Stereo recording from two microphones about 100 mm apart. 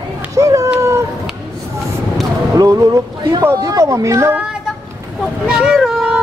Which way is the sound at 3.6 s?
35° right (ahead or behind).